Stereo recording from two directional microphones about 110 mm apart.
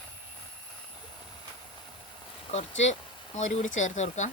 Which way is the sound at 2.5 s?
85° left.